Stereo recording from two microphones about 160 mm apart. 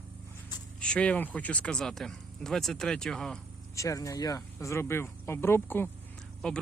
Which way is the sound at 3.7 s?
20° left (ahead or behind).